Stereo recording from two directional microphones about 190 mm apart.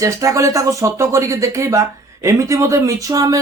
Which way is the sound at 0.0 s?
15° right (ahead or behind).